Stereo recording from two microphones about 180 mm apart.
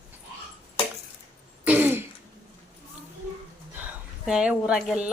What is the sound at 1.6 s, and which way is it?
Throat clearing, 10° right (ahead or behind).